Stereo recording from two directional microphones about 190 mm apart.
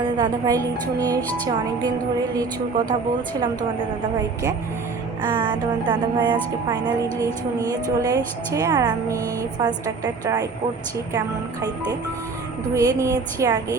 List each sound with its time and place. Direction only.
0.2 s speech: 20° right (ahead or behind)
2.3 s speech: 20° right (ahead or behind)
5.4 s a woman's voice: 25° right (ahead or behind)
12.7 s a woman's voice: 15° right (ahead or behind)